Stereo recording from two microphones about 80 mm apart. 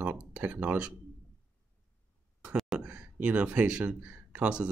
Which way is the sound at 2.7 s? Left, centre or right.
Centre.